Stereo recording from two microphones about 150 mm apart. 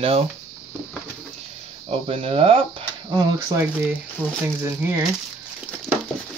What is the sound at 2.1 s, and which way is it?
Speech, 40° right (ahead or behind).